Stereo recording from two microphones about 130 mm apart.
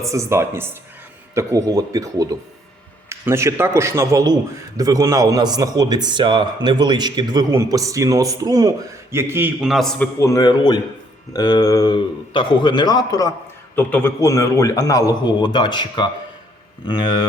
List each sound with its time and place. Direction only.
0.0 s a man's voice: 25° right (ahead or behind)
9.6 s a man's voice: centre (ahead or behind)
10.2 s a man's voice: 25° left (ahead or behind)
13.7 s a man's voice: 15° left (ahead or behind); by 17.2 s 35° left (ahead or behind)